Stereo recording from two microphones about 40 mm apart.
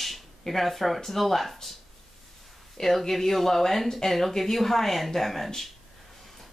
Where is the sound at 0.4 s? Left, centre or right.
Centre.